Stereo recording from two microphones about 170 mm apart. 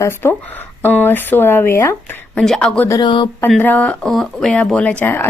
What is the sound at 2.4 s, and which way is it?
Speech, 5° left (ahead or behind).